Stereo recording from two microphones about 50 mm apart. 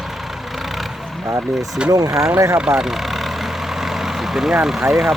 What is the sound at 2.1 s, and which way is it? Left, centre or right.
Speech, right.